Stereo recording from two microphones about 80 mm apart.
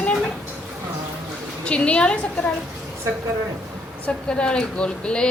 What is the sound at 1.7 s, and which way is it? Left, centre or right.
Speech, centre.